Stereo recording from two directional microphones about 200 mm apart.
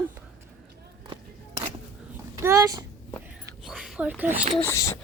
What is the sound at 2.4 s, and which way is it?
Speech, 15° right (ahead or behind).